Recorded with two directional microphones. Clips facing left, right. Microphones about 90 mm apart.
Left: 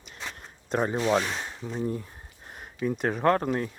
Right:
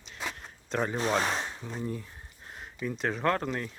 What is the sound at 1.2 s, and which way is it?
Speech, 35° right (ahead or behind).